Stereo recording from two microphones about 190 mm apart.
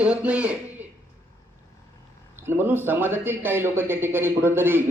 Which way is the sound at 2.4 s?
10° right (ahead or behind).